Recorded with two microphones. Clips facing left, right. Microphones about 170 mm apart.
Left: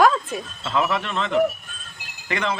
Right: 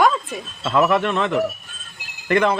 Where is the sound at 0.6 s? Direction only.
55° right (ahead or behind).